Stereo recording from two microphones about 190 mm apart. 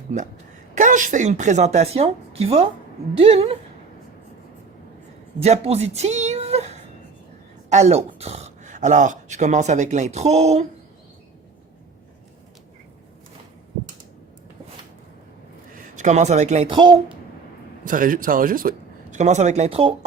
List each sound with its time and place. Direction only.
0.8 s speech: 40° right (ahead or behind)
5.4 s a sound: 35° right (ahead or behind)
7.7 s speech: 35° right (ahead or behind)
16.0 s speech: 40° right (ahead or behind)
17.8 s speech: 45° right (ahead or behind)